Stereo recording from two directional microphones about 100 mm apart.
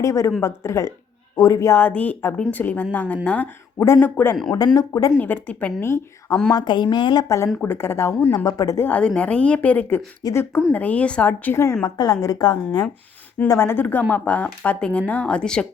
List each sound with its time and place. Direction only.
0.0 s a woman's voice: 30° left (ahead or behind)
1.8 s speech: 15° left (ahead or behind)
3.8 s speech: 30° left (ahead or behind)
4.5 s a woman's voice: 40° left (ahead or behind)
5.1 s speech: 15° left (ahead or behind)
5.8 s speech: 25° left (ahead or behind)
6.5 s speech: 45° left (ahead or behind)
7.3 s a woman's voice: 30° left (ahead or behind)
8.4 s a woman's voice: 35° left (ahead or behind)
8.9 s speech: 10° left (ahead or behind)
10.2 s a woman's voice: 40° left (ahead or behind)
10.7 s speech: 15° left (ahead or behind)
11.8 s a woman's voice: 40° left (ahead or behind)
13.6 s speech: 20° left (ahead or behind)